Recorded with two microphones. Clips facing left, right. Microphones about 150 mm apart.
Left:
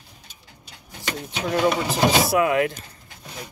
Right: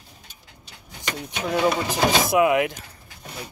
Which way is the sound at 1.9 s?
15° right (ahead or behind).